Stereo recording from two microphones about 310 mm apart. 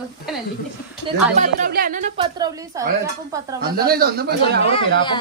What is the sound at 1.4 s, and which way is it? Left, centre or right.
Speech, right.